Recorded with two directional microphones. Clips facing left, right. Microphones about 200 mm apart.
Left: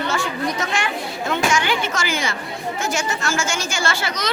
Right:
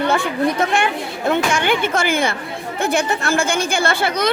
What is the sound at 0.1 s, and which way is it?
A child's voice, 55° right (ahead or behind).